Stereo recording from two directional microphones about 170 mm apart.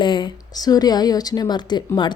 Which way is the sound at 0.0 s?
30° left (ahead or behind).